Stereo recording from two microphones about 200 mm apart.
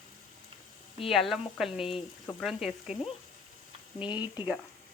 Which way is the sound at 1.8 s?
30° left (ahead or behind).